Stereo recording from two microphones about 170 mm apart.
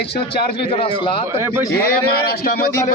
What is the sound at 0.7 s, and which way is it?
Speech, 35° left (ahead or behind).